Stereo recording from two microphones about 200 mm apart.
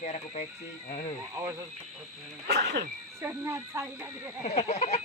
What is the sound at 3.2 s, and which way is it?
Speech, 15° right (ahead or behind).